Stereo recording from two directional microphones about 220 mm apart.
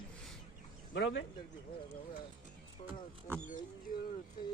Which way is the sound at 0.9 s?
55° left (ahead or behind).